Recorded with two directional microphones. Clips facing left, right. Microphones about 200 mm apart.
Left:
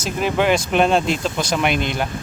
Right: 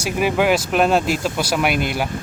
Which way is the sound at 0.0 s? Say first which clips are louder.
Right 1 dB; 10° right (ahead or behind).